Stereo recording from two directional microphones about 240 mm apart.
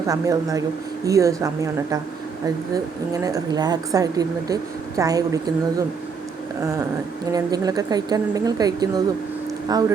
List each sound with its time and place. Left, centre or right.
0.1 s a woman's voice: centre